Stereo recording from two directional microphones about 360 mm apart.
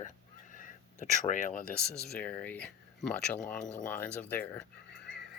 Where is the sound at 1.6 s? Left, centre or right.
Left.